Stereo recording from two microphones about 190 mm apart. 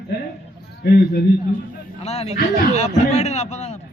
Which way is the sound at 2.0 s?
35° left (ahead or behind).